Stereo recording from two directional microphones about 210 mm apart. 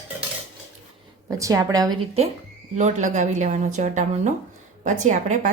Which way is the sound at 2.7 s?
35° right (ahead or behind).